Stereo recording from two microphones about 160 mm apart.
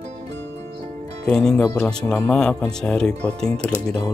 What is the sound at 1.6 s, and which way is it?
Speech, 15° left (ahead or behind).